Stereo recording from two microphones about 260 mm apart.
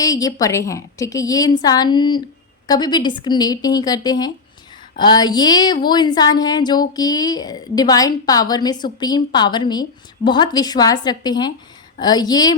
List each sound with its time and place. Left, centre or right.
0.0 s speech: centre